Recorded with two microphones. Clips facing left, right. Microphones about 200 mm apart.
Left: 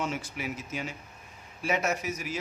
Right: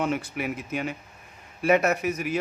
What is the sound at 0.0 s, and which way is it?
A man's voice, 60° right (ahead or behind).